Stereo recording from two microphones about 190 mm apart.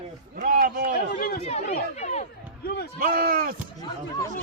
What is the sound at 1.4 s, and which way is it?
Speech, 35° left (ahead or behind).